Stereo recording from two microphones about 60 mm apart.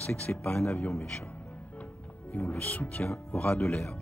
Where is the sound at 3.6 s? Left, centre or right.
Centre.